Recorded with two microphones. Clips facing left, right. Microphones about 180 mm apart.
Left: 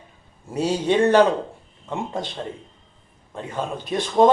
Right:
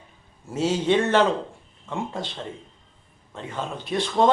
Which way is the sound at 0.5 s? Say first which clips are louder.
Left 1 dB; 15° left (ahead or behind).